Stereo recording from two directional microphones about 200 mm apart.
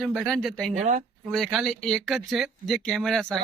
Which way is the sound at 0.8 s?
40° right (ahead or behind).